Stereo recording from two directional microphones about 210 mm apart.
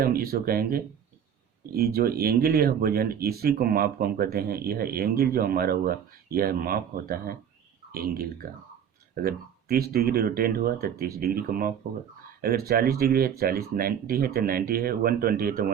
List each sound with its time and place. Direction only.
0.0 s speech: 45° right (ahead or behind)